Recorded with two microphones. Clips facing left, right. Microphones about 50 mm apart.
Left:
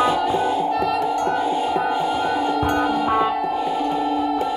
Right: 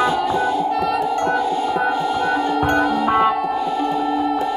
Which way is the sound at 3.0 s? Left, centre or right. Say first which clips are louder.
Right 3 dB; right.